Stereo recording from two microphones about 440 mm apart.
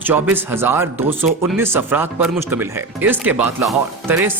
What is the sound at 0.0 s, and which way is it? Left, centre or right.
Speech, centre.